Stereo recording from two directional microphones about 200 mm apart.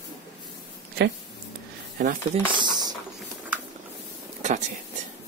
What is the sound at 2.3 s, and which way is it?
Speech, 25° right (ahead or behind).